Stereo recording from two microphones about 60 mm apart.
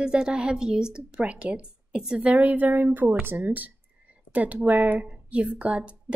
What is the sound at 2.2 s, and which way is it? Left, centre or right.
Speech, right.